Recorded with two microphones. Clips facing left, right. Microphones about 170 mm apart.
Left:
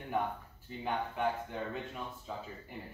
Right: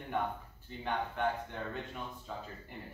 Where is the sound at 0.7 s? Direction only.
5° left (ahead or behind).